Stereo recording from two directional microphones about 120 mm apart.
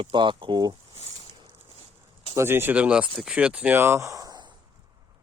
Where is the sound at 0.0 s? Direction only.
40° right (ahead or behind).